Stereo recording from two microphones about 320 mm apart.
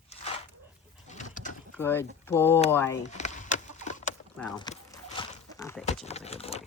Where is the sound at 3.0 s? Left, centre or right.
Left.